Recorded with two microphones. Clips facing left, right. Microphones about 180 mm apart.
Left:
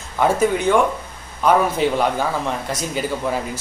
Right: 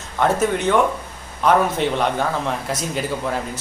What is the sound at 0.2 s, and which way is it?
Speech, centre (ahead or behind).